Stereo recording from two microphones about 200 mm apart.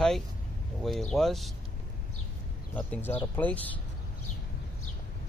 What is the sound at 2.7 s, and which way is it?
Speech, 5° left (ahead or behind).